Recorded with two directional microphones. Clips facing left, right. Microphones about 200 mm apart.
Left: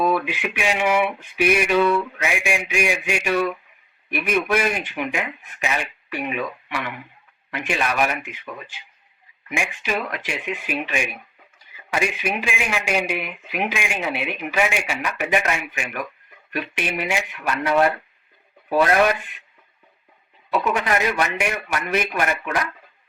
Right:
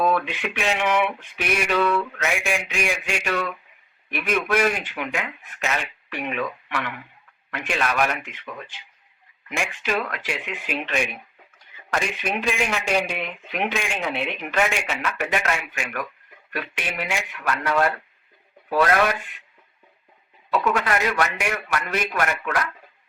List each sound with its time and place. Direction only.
0.0 s speech: 10° left (ahead or behind)
20.5 s speech: 20° left (ahead or behind)